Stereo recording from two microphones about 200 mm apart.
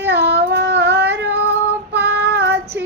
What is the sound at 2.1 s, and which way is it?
Child singing, 60° right (ahead or behind).